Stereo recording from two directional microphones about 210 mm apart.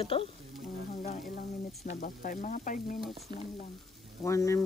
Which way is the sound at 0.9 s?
35° left (ahead or behind).